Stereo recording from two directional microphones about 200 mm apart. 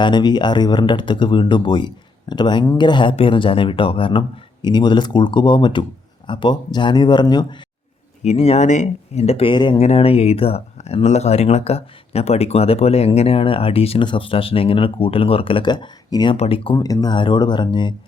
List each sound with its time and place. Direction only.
0.0 s speech: 20° left (ahead or behind)
8.2 s speech: 30° left (ahead or behind)